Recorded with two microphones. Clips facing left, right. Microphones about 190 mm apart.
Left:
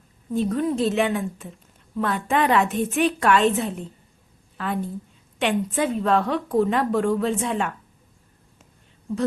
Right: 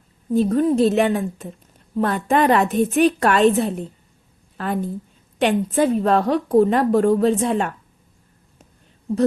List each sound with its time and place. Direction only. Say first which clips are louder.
0.3 s a woman's voice: right 6 dB; 35° right (ahead or behind)